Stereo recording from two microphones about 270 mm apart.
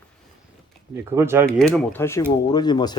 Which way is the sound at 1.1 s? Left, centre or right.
Centre.